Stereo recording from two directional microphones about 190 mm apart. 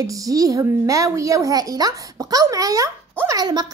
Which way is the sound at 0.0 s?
20° right (ahead or behind).